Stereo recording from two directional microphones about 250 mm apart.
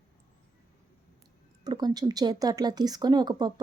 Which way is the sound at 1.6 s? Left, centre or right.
Centre.